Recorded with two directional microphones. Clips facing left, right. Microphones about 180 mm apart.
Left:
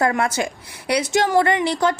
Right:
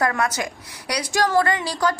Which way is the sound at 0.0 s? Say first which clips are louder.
Left 3 dB; 25° left (ahead or behind).